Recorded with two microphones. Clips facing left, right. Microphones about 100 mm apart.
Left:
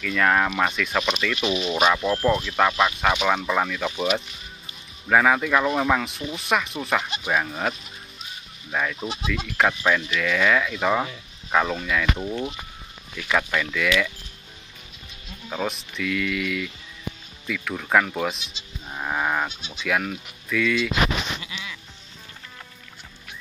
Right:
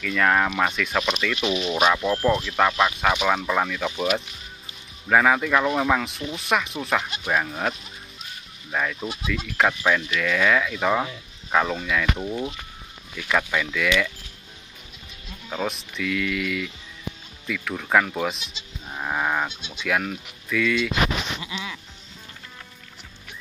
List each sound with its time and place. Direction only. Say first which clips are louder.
0.0 s speech: even; centre (ahead or behind)
8.7 s speech: even; 5° left (ahead or behind)
15.5 s speech: even; centre (ahead or behind)
21.4 s music: right 4 dB; 25° right (ahead or behind)